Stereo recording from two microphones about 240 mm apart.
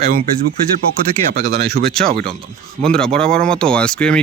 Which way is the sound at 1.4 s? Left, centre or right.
Right.